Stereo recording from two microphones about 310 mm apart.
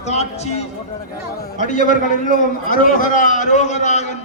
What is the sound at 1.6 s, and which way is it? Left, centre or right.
A man's voice, left.